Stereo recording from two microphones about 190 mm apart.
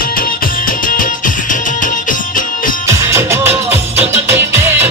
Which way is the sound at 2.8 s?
15° right (ahead or behind).